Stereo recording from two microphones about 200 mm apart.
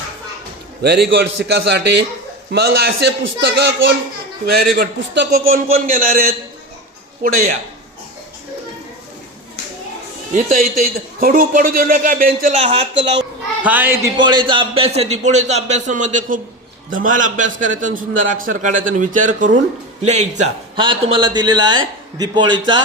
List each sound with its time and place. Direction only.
0.8 s a child's voice: 55° right (ahead or behind)
10.3 s a man's voice: 40° right (ahead or behind)
13.6 s speech: 10° right (ahead or behind)
14.2 s a man's voice: 25° right (ahead or behind)
20.7 s a man's voice: 25° right (ahead or behind)